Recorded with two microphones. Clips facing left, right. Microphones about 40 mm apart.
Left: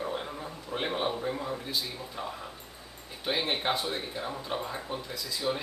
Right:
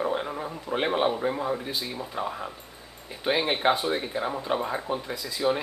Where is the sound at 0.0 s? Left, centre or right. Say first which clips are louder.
Right 6 dB; right.